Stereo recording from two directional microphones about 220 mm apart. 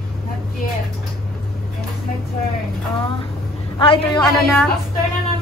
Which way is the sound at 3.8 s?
20° left (ahead or behind).